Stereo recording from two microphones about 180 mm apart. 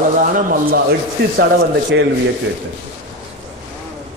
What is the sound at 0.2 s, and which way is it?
Speech, 50° right (ahead or behind).